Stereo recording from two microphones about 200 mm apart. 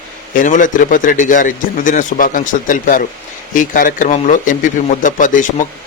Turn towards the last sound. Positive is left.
turn(degrees=40)  # may be behind; listen again after turning